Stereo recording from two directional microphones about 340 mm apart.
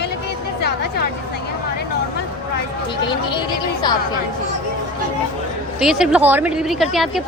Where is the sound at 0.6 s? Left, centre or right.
Left.